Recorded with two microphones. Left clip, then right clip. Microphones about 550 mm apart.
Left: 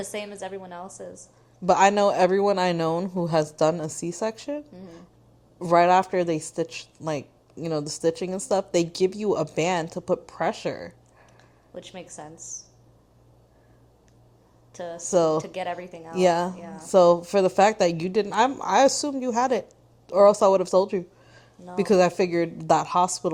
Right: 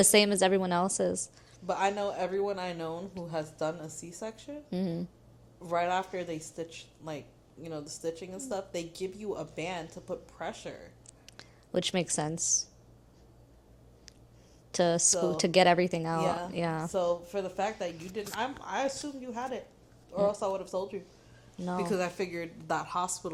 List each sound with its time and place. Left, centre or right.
0.0 s a woman's voice: right
1.6 s a woman's voice: left
11.3 s speech: right
14.7 s a woman's voice: right
15.1 s a woman's voice: left
15.4 s a woman's voice: right
16.1 s a woman's voice: left
16.6 s a woman's voice: right
16.9 s a woman's voice: left
21.8 s a woman's voice: left